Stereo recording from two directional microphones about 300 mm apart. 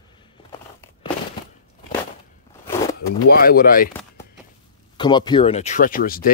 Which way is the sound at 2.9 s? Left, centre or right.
Left.